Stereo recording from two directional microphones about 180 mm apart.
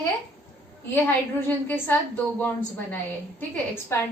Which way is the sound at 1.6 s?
10° left (ahead or behind).